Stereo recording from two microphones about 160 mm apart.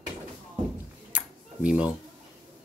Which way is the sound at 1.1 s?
10° right (ahead or behind).